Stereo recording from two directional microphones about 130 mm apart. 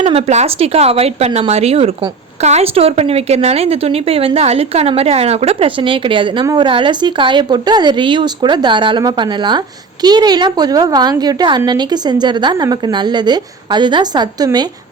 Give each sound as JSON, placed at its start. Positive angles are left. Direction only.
{"t": 0.1, "sound": "a woman's voice", "side_deg": -55}